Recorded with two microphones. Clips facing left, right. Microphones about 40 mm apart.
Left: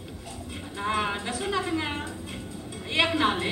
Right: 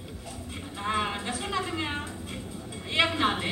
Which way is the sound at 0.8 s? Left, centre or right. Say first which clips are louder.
Left 2 dB; centre.